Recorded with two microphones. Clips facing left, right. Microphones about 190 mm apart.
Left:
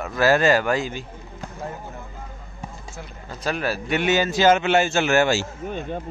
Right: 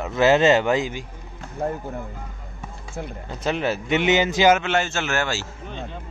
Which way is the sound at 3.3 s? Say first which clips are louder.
Right 1 dB; 20° right (ahead or behind).